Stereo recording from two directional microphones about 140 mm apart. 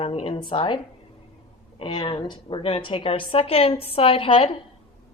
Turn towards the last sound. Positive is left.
turn(degrees=45)  # may be behind; listen again after turning